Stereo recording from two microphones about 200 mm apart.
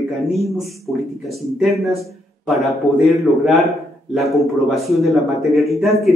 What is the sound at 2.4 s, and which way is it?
A man's voice, centre (ahead or behind).